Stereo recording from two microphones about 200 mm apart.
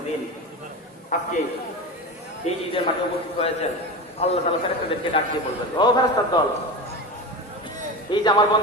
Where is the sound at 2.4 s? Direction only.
35° left (ahead or behind).